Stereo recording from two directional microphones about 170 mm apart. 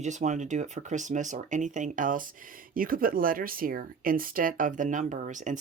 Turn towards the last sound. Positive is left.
turn(degrees=-50)  # may be behind; listen again after turning